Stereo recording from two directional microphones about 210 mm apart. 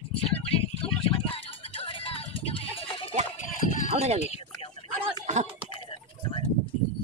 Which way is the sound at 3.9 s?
30° right (ahead or behind).